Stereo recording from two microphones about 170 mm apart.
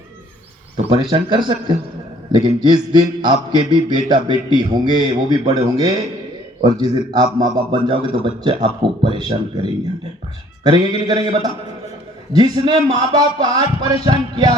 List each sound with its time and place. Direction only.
0.9 s a man's voice: 30° right (ahead or behind)
11.1 s a man's voice: 35° right (ahead or behind)